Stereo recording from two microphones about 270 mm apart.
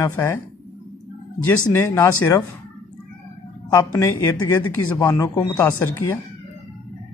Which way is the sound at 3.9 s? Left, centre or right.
Centre.